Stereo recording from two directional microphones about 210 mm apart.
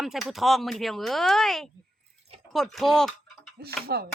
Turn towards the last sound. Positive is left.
turn(degrees=-50)  # may be behind; listen again after turning